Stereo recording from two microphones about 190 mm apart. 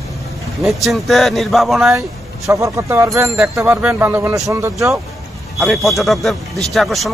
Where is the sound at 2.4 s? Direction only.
15° right (ahead or behind).